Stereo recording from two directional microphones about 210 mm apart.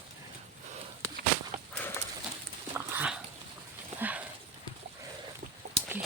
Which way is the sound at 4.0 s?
5° right (ahead or behind).